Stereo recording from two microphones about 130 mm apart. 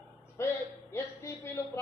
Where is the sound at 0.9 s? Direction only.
20° left (ahead or behind).